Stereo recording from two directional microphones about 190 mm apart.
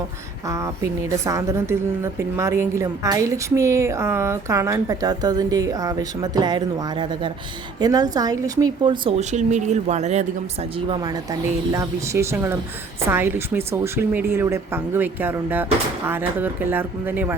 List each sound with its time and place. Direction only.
0.4 s a woman's voice: 15° right (ahead or behind)